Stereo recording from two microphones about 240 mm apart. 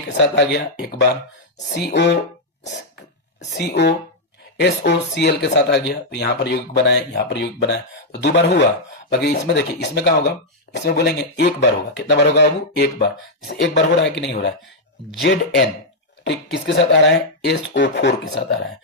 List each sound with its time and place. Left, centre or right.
0.2 s speech: left
3.5 s speech: left